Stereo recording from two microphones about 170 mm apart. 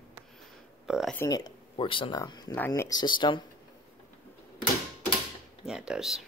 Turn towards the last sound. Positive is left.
turn(degrees=-5)  # may be behind; listen again after turning